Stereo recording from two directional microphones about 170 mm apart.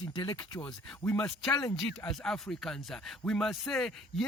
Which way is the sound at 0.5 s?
10° left (ahead or behind).